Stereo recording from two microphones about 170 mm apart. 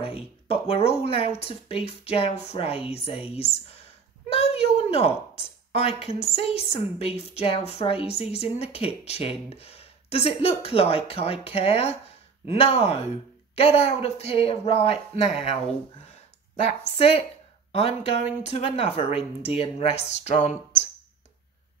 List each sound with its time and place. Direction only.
0.0 s a woman's voice: 35° left (ahead or behind)
16.6 s a woman's voice: 35° left (ahead or behind)